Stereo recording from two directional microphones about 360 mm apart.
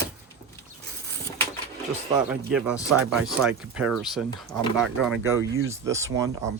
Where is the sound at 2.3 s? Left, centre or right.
Centre.